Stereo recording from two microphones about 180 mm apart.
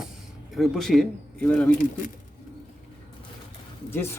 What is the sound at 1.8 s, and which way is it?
Speech, 45° left (ahead or behind).